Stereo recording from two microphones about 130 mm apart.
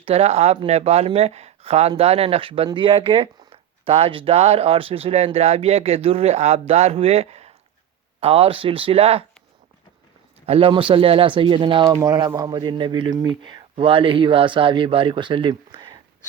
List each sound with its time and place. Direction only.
0.0 s speech: 50° right (ahead or behind)
10.4 s speech: 50° right (ahead or behind)